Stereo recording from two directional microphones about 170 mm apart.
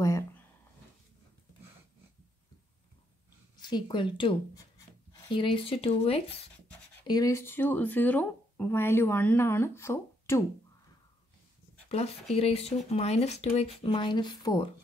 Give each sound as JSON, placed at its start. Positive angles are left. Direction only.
{"t": 3.5, "sound": "speech", "side_deg": 25}
{"t": 7.1, "sound": "speech", "side_deg": 20}
{"t": 12.4, "sound": "speech", "side_deg": 35}